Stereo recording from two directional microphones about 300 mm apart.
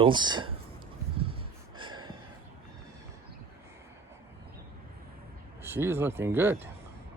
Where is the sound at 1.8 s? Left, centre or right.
Centre.